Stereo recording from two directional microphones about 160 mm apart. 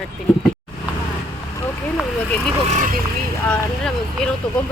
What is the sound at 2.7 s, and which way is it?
Speech, 50° right (ahead or behind).